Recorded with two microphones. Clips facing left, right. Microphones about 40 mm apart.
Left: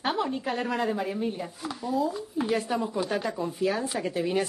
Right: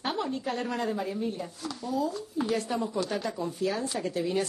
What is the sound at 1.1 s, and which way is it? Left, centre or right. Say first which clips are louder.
Speech: left 2 dB; left.